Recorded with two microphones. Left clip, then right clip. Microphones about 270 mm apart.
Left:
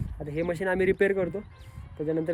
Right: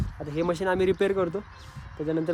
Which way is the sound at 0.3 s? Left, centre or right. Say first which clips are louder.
Right 2 dB; centre.